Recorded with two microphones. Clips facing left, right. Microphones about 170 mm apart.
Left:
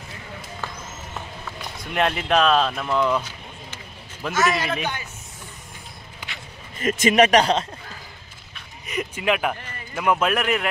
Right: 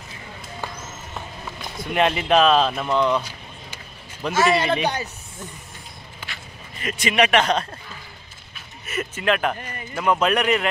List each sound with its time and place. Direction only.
1.8 s speech: centre (ahead or behind)
4.3 s a man's voice: 30° right (ahead or behind)
6.8 s speech: 45° left (ahead or behind)
8.8 s speech: 15° left (ahead or behind)